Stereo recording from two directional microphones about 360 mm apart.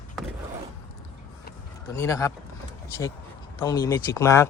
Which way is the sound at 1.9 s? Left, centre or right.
Centre.